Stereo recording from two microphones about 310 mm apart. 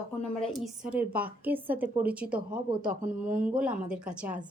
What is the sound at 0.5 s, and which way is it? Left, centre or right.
Speech, centre.